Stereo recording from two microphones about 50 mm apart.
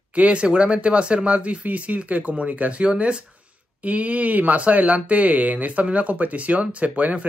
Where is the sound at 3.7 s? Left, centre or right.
Right.